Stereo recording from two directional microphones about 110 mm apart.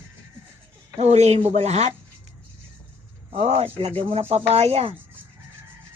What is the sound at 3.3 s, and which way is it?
Speech, 70° right (ahead or behind).